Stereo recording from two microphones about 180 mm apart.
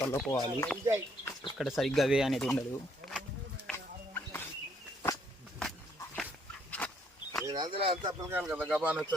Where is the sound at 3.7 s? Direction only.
10° left (ahead or behind).